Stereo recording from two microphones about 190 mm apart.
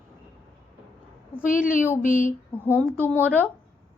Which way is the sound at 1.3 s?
10° left (ahead or behind).